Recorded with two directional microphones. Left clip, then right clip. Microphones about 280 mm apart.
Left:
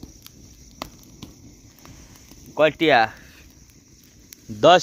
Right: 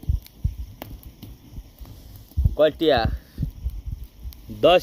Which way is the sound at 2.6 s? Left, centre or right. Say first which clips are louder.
Left 2 dB; left.